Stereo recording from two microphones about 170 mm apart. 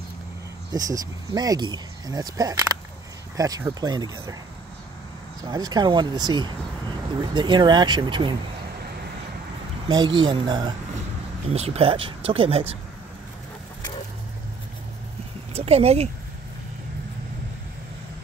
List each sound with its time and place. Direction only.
0.7 s speech: 20° right (ahead or behind)
5.4 s speech: 20° right (ahead or behind)
9.8 s speech: 25° right (ahead or behind)
11.5 s speech: 35° right (ahead or behind)
15.5 s speech: 35° right (ahead or behind)